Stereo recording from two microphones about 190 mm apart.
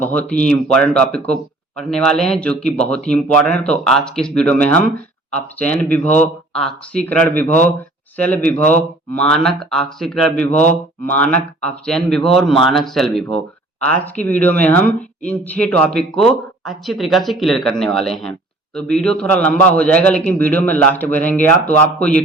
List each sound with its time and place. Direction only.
0.0 s speech: 10° left (ahead or behind)
10.5 s speech: 40° left (ahead or behind)
11.0 s speech: 10° left (ahead or behind)